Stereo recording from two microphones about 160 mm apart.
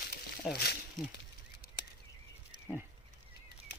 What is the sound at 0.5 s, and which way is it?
Speech, 90° left.